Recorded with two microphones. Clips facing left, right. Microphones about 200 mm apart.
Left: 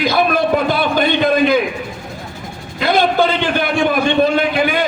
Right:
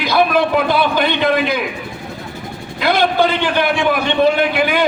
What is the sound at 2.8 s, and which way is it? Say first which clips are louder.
A man's voice: left 1 dB; 50° left (ahead or behind).